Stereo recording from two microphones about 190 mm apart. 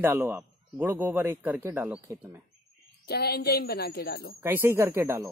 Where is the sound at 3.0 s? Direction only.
55° left (ahead or behind).